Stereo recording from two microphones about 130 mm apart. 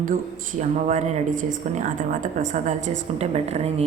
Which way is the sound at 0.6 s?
60° right (ahead or behind).